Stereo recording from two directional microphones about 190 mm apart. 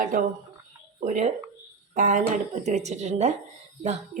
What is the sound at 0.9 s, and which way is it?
A woman's voice, 40° right (ahead or behind).